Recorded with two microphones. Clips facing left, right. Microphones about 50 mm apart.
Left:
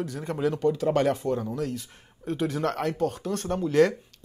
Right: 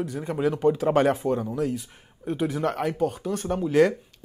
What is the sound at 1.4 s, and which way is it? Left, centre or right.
Speech, centre.